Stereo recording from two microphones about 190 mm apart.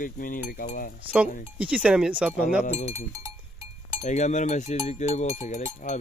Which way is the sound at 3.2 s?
15° right (ahead or behind).